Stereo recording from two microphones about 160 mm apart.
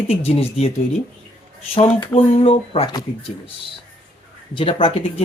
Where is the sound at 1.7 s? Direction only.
30° left (ahead or behind).